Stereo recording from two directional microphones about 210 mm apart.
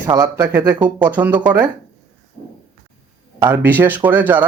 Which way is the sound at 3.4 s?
10° right (ahead or behind).